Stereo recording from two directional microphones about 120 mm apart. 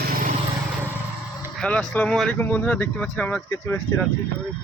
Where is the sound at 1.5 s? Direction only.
5° left (ahead or behind).